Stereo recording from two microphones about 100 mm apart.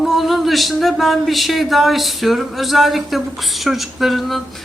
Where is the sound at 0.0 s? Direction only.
Centre (ahead or behind).